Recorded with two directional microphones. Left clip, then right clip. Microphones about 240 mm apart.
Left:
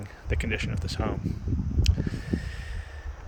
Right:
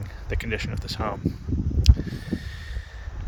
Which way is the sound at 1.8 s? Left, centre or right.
Centre.